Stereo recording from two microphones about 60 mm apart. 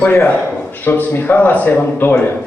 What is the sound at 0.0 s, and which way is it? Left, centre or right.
A man's voice, left.